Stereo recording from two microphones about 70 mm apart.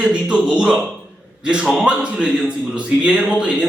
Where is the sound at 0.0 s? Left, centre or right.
Centre.